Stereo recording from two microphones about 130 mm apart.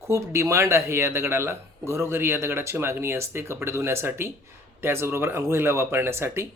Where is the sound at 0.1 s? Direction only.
20° right (ahead or behind).